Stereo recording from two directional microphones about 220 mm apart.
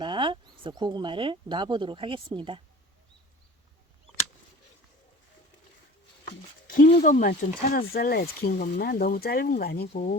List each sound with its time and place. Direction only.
0.0 s speech: 20° right (ahead or behind)
6.7 s speech: 40° left (ahead or behind)
9.9 s speech: 30° left (ahead or behind)